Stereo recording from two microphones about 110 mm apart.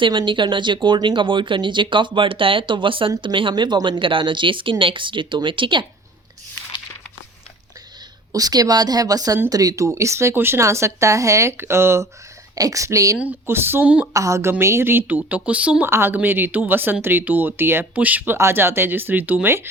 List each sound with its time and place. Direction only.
0.0 s speech: 45° right (ahead or behind)
8.3 s speech: 35° right (ahead or behind)
13.1 s speech: 15° right (ahead or behind)
14.1 s speech: 30° right (ahead or behind)